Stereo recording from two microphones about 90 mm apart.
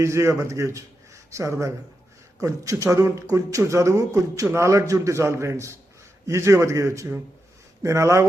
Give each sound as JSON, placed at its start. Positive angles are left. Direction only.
{"t": 0.0, "sound": "a man's voice", "side_deg": -35}